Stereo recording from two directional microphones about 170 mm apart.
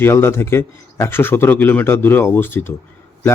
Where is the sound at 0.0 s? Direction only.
15° left (ahead or behind).